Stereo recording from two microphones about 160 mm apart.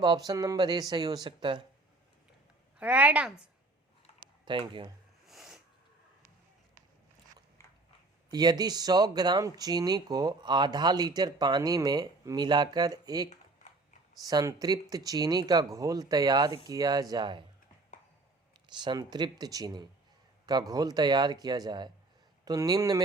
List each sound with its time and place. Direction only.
0.0 s speech: 25° right (ahead or behind)
2.7 s a woman's voice: 10° right (ahead or behind)
4.4 s speech: 30° right (ahead or behind)
5.3 s snort: centre (ahead or behind)
7.6 s biting: 15° left (ahead or behind)
8.3 s speech: 25° right (ahead or behind)
18.8 s speech: 25° right (ahead or behind)